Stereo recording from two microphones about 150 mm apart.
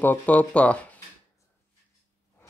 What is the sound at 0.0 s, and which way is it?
Speech, 10° left (ahead or behind).